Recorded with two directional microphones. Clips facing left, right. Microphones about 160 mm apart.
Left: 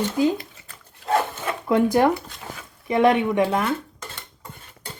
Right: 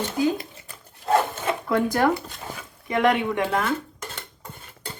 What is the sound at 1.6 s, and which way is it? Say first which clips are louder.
Speech: left 4 dB; 20° left (ahead or behind).